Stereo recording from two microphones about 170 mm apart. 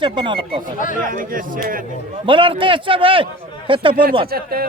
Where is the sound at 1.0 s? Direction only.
55° right (ahead or behind).